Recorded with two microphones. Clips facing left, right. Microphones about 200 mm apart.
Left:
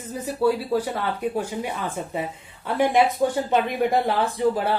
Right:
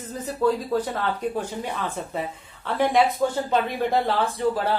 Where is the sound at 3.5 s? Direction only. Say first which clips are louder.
Left 2 dB; 15° left (ahead or behind).